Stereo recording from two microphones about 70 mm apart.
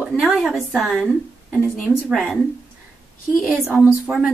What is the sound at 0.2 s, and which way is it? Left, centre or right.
A woman's voice, centre.